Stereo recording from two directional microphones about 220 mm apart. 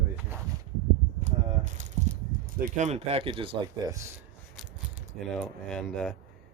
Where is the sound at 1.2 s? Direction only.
35° right (ahead or behind).